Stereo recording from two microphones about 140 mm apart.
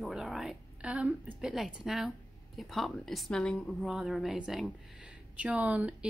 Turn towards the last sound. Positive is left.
turn(degrees=-10)  # may be behind; listen again after turning